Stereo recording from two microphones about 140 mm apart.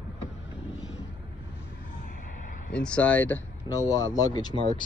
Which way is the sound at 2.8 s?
10° left (ahead or behind).